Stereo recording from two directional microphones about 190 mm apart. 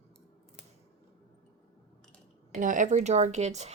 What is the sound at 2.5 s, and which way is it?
Speech, 45° right (ahead or behind).